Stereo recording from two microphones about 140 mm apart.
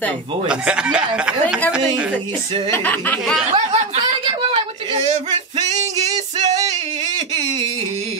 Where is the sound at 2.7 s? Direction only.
15° left (ahead or behind).